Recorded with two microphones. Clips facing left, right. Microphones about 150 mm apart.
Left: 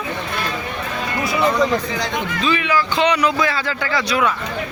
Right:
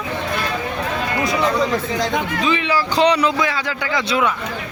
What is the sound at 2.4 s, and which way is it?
Speech, 25° right (ahead or behind).